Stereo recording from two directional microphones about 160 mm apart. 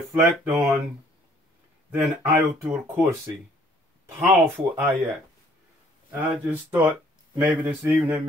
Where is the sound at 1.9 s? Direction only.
15° right (ahead or behind).